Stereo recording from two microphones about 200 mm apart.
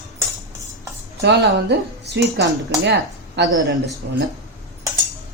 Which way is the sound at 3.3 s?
70° right (ahead or behind).